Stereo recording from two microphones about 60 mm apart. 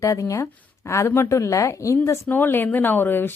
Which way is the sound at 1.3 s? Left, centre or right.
Left.